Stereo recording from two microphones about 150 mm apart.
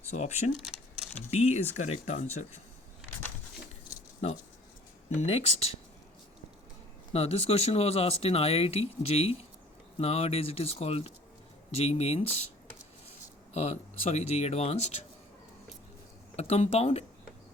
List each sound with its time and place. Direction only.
0.1 s speech: 45° left (ahead or behind)
5.2 s speech: 45° left (ahead or behind)
7.1 s speech: 40° left (ahead or behind)
13.5 s speech: 45° left (ahead or behind)
16.3 s speech: 45° left (ahead or behind)